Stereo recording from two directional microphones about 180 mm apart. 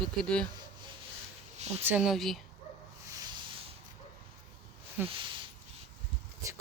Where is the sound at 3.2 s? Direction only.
25° right (ahead or behind).